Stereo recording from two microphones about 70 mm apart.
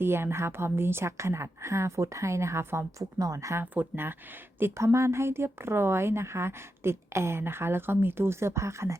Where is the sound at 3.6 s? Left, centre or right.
Right.